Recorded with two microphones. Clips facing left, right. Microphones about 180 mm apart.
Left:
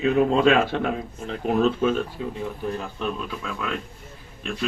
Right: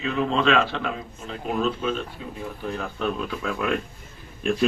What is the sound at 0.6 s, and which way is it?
Speech, 55° left (ahead or behind).